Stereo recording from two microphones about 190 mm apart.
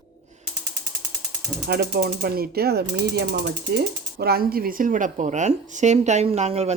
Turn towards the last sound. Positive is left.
turn(degrees=-35)  # may be behind; listen again after turning